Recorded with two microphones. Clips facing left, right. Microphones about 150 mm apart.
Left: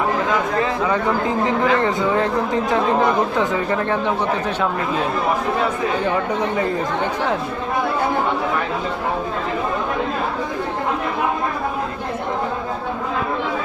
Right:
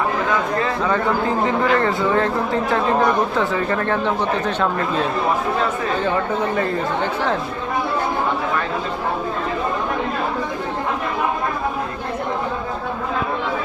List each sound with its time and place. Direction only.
0.3 s speech: 20° left (ahead or behind)